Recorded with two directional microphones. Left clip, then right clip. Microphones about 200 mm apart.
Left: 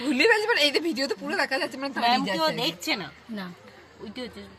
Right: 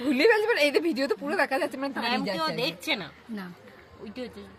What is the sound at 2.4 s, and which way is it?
Speech, 35° left (ahead or behind).